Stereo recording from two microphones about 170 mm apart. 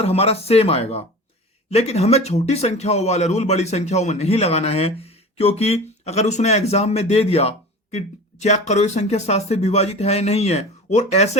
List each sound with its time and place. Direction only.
0.0 s speech: 35° left (ahead or behind)